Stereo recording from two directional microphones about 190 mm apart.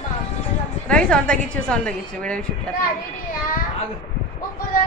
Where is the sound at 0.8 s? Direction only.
5° left (ahead or behind).